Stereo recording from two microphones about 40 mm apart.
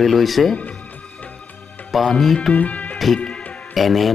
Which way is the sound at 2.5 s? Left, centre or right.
Left.